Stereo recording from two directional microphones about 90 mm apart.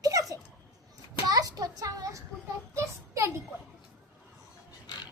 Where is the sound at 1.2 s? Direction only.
45° right (ahead or behind).